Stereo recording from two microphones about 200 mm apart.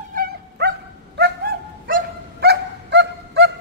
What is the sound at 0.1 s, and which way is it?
Dog, 50° right (ahead or behind).